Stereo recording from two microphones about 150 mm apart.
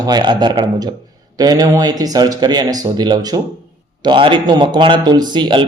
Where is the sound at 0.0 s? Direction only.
30° right (ahead or behind).